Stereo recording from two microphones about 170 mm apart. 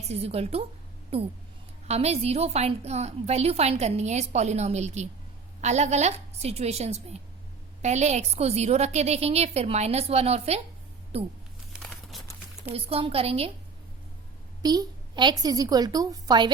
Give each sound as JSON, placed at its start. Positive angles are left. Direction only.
{"t": 0.1, "sound": "a woman's voice", "side_deg": -35}
{"t": 11.8, "sound": "crumpling", "side_deg": 0}
{"t": 12.6, "sound": "a woman's voice", "side_deg": -35}
{"t": 14.6, "sound": "a woman's voice", "side_deg": -25}